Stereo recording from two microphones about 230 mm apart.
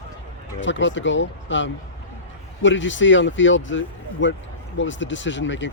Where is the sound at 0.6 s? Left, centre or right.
Left.